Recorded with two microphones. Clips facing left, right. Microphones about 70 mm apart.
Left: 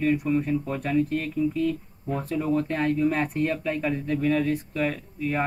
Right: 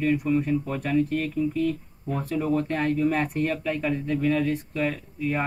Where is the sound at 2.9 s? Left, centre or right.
Left.